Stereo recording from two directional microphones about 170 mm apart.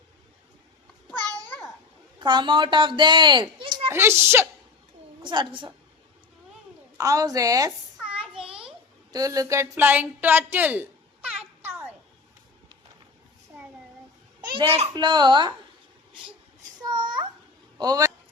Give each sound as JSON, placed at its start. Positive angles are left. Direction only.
{"t": 1.0, "sound": "a sound", "side_deg": -20}
{"t": 2.1, "sound": "speech", "side_deg": -25}
{"t": 3.8, "sound": "speech", "side_deg": -15}
{"t": 5.2, "sound": "speech", "side_deg": -25}
{"t": 6.9, "sound": "speech", "side_deg": -20}
{"t": 9.1, "sound": "a woman's voice", "side_deg": -20}
{"t": 14.7, "sound": "speech", "side_deg": -30}
{"t": 16.8, "sound": "babbling", "side_deg": -25}
{"t": 17.7, "sound": "speech", "side_deg": -20}